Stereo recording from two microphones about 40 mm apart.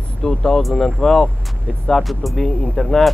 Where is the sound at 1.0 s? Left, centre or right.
Centre.